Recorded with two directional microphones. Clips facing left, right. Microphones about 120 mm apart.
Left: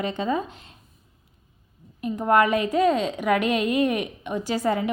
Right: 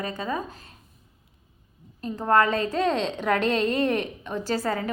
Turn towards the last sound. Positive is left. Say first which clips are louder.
# left 3 dB
turn(degrees=15)  # may be behind; listen again after turning